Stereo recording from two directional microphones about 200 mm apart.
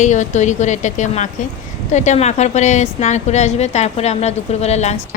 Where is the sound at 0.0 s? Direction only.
35° left (ahead or behind).